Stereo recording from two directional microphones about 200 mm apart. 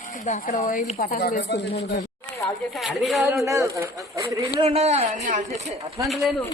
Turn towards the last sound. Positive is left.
turn(degrees=0)  # may be behind; listen again after turning